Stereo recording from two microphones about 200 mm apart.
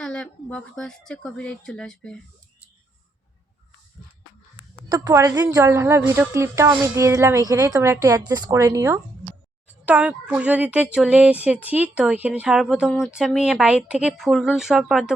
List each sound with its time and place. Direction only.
0.0 s a woman's voice: 5° left (ahead or behind)
4.9 s a woman's voice: 20° right (ahead or behind); by 15.1 s centre (ahead or behind)